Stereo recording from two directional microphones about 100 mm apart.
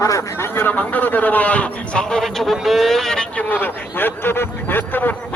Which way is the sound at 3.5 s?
20° left (ahead or behind).